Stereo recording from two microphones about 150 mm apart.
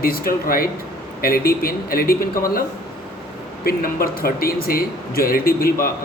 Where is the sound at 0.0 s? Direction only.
80° left.